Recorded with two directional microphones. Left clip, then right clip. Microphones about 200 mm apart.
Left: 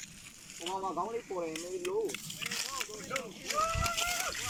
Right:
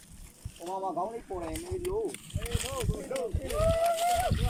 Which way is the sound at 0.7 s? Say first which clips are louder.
Right 2 dB; 15° right (ahead or behind).